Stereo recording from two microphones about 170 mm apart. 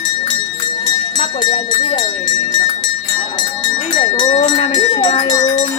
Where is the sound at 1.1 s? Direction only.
30° left (ahead or behind).